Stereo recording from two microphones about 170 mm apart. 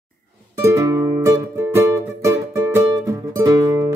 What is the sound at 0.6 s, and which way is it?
Music, 15° right (ahead or behind).